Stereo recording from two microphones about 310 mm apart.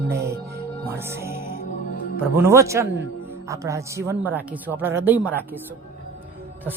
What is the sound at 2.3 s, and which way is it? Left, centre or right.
Speech, centre.